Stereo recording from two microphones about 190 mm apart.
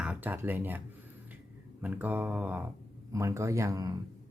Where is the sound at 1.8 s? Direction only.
10° right (ahead or behind).